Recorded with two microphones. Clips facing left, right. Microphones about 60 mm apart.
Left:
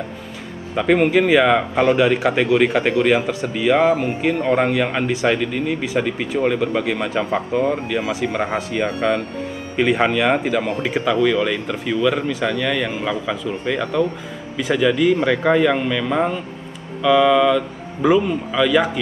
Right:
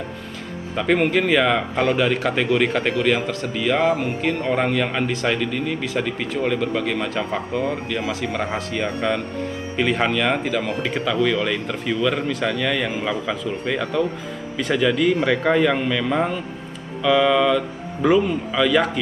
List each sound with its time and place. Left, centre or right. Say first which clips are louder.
0.7 s a man's voice: left 3 dB; centre